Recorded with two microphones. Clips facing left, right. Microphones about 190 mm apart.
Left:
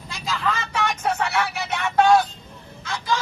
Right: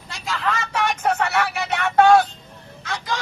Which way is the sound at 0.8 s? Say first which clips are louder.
Right 3 dB; 60° right (ahead or behind).